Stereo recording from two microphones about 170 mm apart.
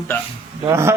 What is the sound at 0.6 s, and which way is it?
Speech, 15° right (ahead or behind).